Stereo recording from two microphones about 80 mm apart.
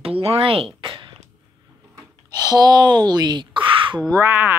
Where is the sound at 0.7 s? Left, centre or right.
Right.